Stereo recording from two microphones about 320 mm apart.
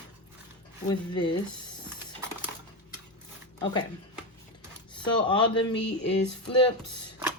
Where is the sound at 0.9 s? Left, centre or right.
Centre.